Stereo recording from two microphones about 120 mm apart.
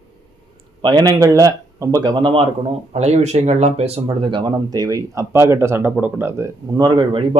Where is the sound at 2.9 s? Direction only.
65° right (ahead or behind).